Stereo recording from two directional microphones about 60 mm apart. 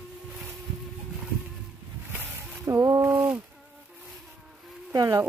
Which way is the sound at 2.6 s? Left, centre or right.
Right.